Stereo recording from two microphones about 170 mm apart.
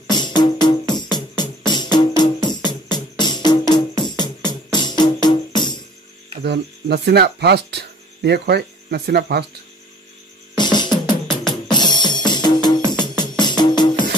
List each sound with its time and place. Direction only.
0.1 s music: 25° left (ahead or behind)
6.4 s speech: 75° right (ahead or behind)
10.5 s music: 25° left (ahead or behind)